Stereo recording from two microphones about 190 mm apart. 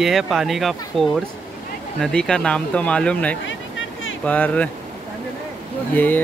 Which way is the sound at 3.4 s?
85° left.